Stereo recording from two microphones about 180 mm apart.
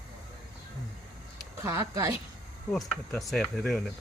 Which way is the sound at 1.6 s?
15° right (ahead or behind).